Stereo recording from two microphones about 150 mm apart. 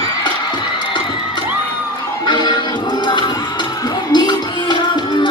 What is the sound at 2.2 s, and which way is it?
Music, 30° left (ahead or behind).